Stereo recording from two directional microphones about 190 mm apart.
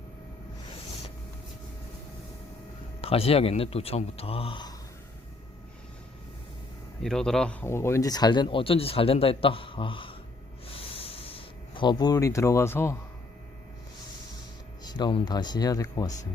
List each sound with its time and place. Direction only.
3.0 s speech: 30° left (ahead or behind)
7.0 s speech: 5° left (ahead or behind); by 10.2 s 25° left (ahead or behind)
10.7 s a sound: 30° left (ahead or behind); by 13.0 s 15° left (ahead or behind)
14.8 s speech: 25° left (ahead or behind)